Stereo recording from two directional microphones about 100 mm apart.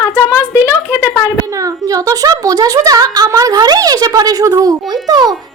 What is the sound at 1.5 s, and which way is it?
Speech, 35° right (ahead or behind).